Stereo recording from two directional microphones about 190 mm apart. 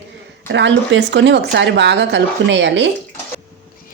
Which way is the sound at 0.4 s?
65° right (ahead or behind).